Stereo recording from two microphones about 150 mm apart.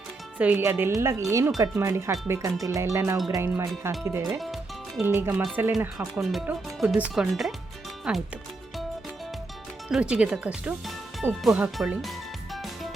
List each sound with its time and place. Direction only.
0.3 s speech: 10° right (ahead or behind)
4.4 s music: centre (ahead or behind)
5.0 s speech: 15° right (ahead or behind)
6.0 s speech: centre (ahead or behind)
9.9 s speech: 5° right (ahead or behind)
12.5 s music: centre (ahead or behind)